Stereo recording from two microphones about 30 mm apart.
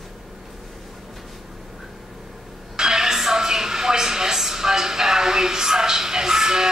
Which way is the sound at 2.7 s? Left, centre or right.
Centre.